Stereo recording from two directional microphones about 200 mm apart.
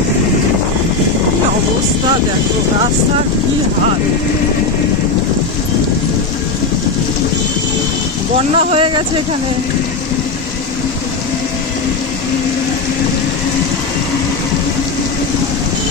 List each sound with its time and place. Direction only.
8.5 s speech: 30° right (ahead or behind)